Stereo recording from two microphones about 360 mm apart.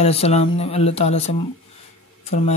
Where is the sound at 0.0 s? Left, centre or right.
Centre.